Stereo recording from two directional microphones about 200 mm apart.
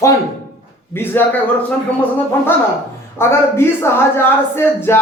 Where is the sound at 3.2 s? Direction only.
10° left (ahead or behind).